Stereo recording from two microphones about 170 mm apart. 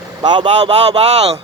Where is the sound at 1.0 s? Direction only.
40° right (ahead or behind).